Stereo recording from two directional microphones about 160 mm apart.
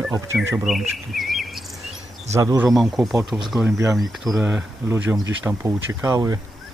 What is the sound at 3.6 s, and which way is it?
Speech, 20° right (ahead or behind).